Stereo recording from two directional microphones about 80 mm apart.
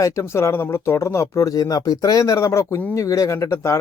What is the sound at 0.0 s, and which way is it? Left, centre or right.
Speech, left.